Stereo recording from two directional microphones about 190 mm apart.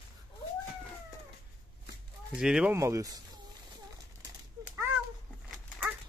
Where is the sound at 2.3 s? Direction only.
5° right (ahead or behind).